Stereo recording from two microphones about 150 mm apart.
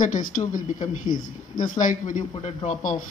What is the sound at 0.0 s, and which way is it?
Speech, 60° left (ahead or behind).